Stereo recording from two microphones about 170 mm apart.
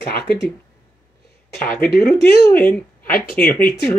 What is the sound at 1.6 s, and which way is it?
Speech, 60° left (ahead or behind).